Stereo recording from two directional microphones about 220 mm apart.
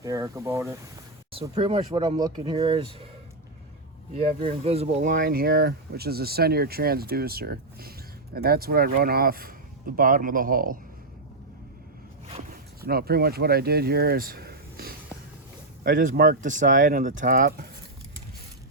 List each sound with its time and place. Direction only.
0.0 s speech: 15° right (ahead or behind)
1.3 s speech: 25° right (ahead or behind)
4.1 s speech: 25° right (ahead or behind)
12.8 s speech: 45° right (ahead or behind)